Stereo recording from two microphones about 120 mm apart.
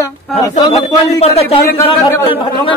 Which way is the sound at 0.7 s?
60° left (ahead or behind).